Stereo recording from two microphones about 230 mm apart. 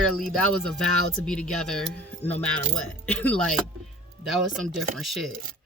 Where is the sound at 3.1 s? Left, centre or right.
Centre.